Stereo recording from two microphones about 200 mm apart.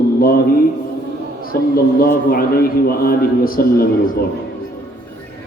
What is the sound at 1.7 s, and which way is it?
A man's voice, 45° left (ahead or behind).